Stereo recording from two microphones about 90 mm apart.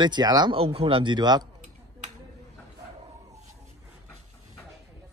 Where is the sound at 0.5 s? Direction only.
90° right; by 1.4 s 55° right (ahead or behind).